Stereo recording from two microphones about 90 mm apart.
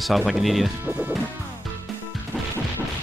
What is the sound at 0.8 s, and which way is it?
Music, 20° right (ahead or behind).